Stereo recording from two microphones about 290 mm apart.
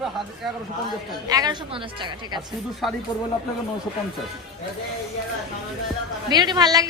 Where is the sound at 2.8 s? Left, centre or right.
Centre.